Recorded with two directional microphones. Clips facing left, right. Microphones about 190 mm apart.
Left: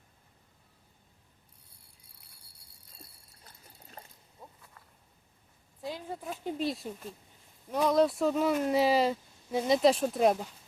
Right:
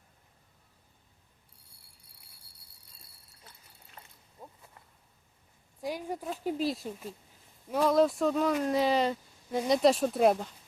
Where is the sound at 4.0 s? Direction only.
40° left (ahead or behind).